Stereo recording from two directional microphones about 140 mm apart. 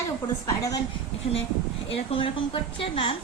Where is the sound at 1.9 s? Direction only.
40° left (ahead or behind).